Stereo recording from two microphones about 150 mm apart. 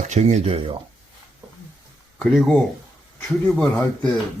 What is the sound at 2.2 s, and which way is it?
A man's voice, centre (ahead or behind).